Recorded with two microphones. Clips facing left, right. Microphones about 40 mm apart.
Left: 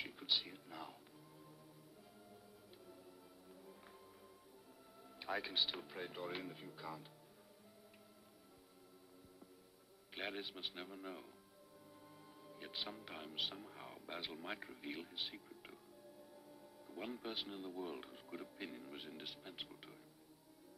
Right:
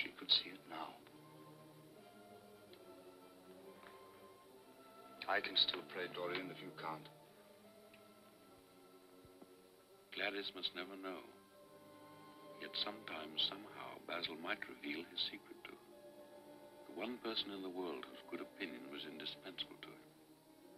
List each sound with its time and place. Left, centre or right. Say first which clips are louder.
0.0 s a sound: right 2 dB; centre
5.2 s speech: right 3 dB; centre
10.1 s speech: right 3 dB; centre
12.4 s speech: right 2 dB; centre